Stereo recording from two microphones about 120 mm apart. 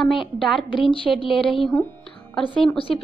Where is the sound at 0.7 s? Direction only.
45° left (ahead or behind).